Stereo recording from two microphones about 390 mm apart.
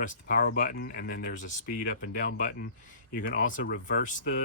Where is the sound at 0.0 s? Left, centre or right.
Left.